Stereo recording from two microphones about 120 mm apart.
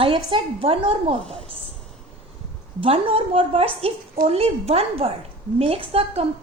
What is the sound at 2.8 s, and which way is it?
A woman's voice, 50° right (ahead or behind).